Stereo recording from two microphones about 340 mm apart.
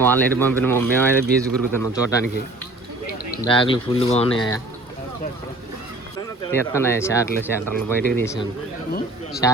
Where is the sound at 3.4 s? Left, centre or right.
Centre.